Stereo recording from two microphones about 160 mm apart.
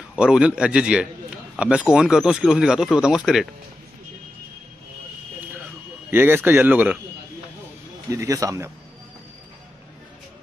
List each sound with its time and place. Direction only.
0.1 s speech: 5° right (ahead or behind)
6.0 s speech: 15° right (ahead or behind)
8.1 s speech: 20° right (ahead or behind)